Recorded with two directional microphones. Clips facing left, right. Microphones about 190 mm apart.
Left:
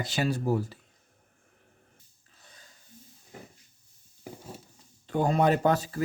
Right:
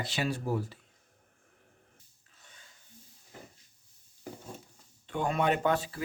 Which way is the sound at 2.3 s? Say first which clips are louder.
Left 3 dB; 35° left (ahead or behind).